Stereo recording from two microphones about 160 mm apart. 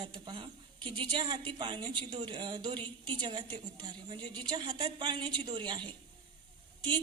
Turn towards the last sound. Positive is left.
turn(degrees=-30)  # may be behind; listen again after turning